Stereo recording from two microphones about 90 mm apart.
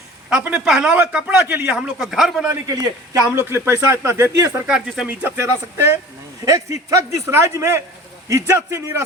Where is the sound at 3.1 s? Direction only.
30° right (ahead or behind).